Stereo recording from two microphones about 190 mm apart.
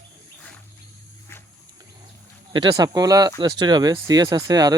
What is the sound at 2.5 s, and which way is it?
Speech, 20° right (ahead or behind).